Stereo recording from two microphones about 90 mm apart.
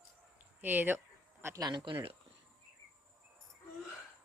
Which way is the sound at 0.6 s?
20° right (ahead or behind).